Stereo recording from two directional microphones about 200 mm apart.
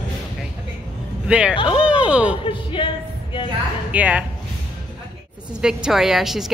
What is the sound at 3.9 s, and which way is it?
Speech, 5° right (ahead or behind).